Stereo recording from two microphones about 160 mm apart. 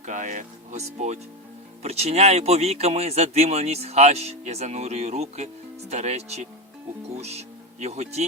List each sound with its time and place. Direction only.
0.0 s speech: 50° right (ahead or behind)